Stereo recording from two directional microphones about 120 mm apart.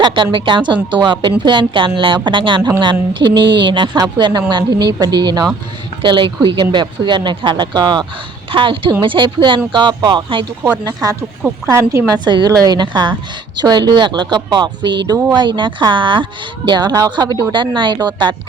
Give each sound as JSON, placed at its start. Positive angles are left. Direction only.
{"t": 0.0, "sound": "a woman's voice", "side_deg": -45}
{"t": 11.7, "sound": "a woman's voice", "side_deg": -25}
{"t": 12.1, "sound": "a woman's voice", "side_deg": -35}